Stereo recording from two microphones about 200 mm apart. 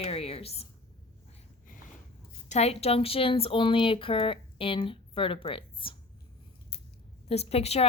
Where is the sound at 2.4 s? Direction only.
35° left (ahead or behind).